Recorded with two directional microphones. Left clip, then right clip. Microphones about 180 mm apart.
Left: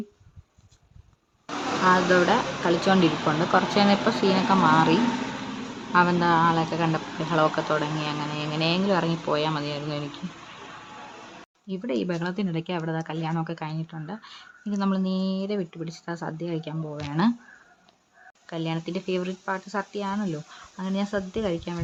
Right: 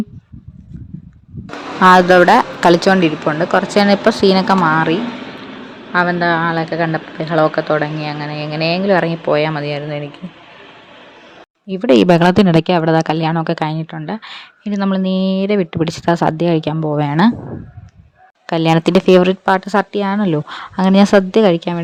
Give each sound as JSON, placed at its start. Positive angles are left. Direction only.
{"t": 1.9, "sound": "a woman's voice", "side_deg": -55}
{"t": 3.0, "sound": "speech", "side_deg": -25}
{"t": 5.9, "sound": "speech", "side_deg": -10}
{"t": 11.9, "sound": "a woman's voice", "side_deg": -60}
{"t": 15.8, "sound": "a woman's voice", "side_deg": -55}
{"t": 18.4, "sound": "speech", "side_deg": -60}